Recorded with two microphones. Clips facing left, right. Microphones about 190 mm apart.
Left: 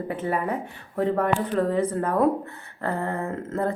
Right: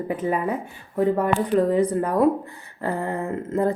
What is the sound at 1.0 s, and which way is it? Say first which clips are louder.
A woman's voice: right 2 dB; 10° right (ahead or behind).